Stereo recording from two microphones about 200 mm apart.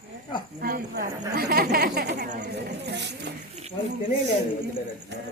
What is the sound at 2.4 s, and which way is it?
Speech, 60° right (ahead or behind).